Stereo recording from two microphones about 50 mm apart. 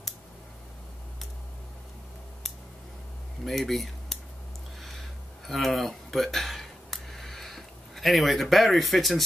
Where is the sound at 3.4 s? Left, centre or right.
Centre.